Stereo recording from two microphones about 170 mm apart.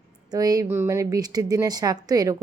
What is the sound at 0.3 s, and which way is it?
Speech, 20° right (ahead or behind).